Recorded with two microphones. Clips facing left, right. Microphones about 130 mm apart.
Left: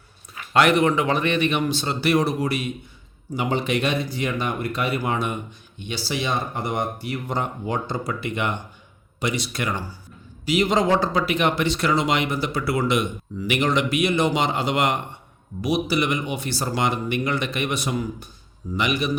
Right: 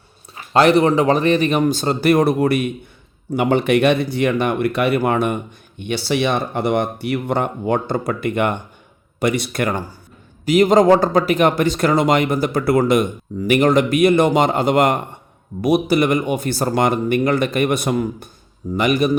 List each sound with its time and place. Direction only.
0.3 s a man's voice: 35° right (ahead or behind)